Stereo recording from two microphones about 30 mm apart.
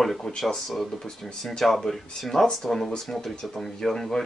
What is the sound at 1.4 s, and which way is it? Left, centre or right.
Speech, centre.